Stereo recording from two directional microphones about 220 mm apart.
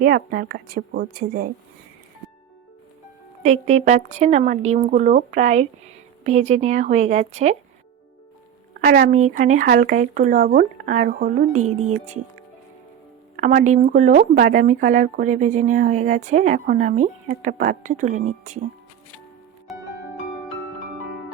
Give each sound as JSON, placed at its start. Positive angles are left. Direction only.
{"t": 0.0, "sound": "speech", "side_deg": -40}
{"t": 3.4, "sound": "speech", "side_deg": -30}
{"t": 8.8, "sound": "speech", "side_deg": -40}
{"t": 13.4, "sound": "speech", "side_deg": -35}
{"t": 19.7, "sound": "music", "side_deg": 0}